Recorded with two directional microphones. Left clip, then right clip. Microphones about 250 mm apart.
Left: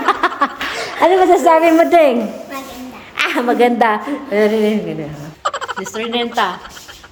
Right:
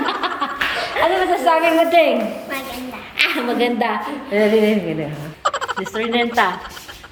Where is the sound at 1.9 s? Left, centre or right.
Centre.